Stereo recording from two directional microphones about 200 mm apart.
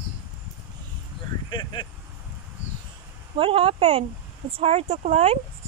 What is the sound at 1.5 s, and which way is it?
Speech, 25° left (ahead or behind).